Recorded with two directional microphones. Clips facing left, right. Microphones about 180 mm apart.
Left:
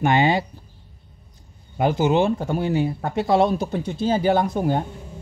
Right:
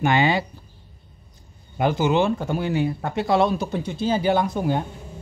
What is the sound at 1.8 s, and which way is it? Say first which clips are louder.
Speech: left 1 dB; 45° left (ahead or behind).